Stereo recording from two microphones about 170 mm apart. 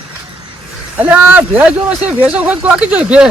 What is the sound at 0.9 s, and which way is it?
Speech, 10° right (ahead or behind).